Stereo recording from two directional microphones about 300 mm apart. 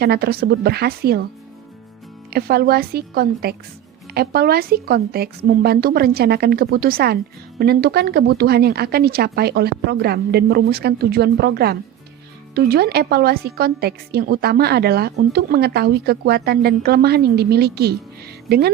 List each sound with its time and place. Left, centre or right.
0.0 s a woman's voice: right
2.3 s a woman's voice: right